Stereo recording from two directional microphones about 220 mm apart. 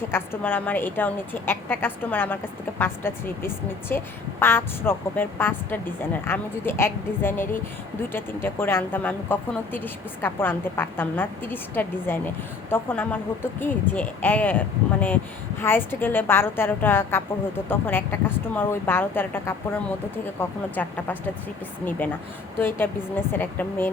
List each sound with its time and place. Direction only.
0.1 s a woman's voice: 10° left (ahead or behind)
15.6 s a woman's voice: 10° left (ahead or behind)